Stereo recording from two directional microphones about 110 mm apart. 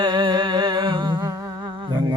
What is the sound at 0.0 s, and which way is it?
Humming, 45° right (ahead or behind).